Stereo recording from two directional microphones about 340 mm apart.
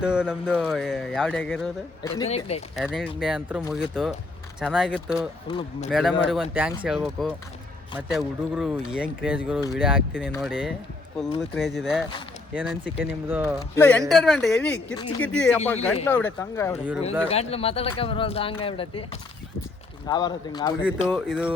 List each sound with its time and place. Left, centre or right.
0.0 s speech: centre
2.7 s speech: centre
4.6 s speech: centre
5.5 s speech: centre
5.9 s speech: centre
21.1 s speech: centre